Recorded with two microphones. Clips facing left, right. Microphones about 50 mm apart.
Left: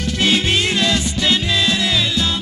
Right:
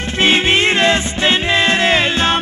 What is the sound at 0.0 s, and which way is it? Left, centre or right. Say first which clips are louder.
Music: right 3 dB; right.